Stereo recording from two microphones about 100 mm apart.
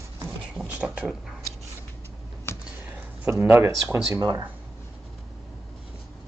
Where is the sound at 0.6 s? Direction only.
10° right (ahead or behind).